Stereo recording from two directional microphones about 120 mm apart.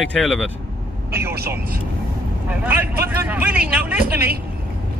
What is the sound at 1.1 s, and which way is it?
A man's voice, 20° right (ahead or behind).